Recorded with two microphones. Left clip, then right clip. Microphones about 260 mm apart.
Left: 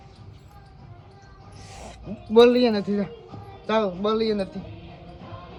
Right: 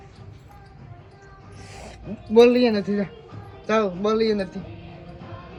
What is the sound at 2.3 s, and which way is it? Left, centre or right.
A man's voice, left.